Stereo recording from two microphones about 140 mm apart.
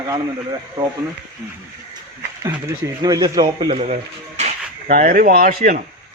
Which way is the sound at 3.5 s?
45° right (ahead or behind).